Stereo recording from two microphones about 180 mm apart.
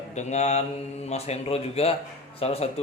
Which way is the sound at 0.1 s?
40° left (ahead or behind).